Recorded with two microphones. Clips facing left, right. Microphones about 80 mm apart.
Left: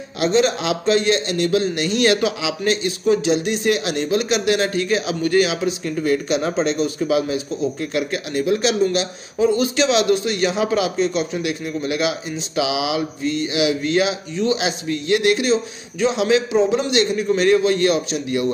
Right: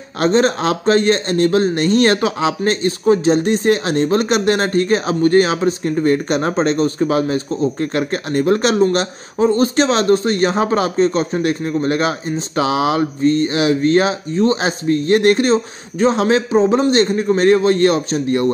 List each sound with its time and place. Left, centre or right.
0.2 s speech: right